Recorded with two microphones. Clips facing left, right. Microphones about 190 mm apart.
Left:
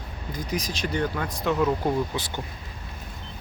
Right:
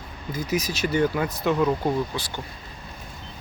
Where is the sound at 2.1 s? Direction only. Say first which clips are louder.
Left 1 dB; 15° left (ahead or behind).